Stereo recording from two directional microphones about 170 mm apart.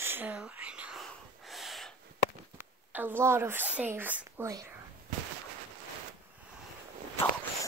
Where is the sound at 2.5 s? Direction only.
10° right (ahead or behind).